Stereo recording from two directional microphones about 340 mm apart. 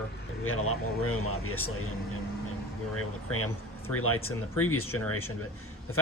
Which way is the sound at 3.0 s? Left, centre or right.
Left.